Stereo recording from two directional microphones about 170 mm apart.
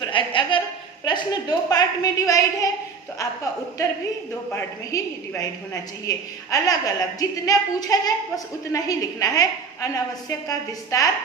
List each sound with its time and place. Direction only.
0.0 s a sound: 30° left (ahead or behind)
1.0 s a woman's voice: 25° left (ahead or behind)
4.9 s a woman's voice: 20° left (ahead or behind)